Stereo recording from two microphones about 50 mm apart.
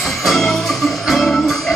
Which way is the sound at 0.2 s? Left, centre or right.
Centre.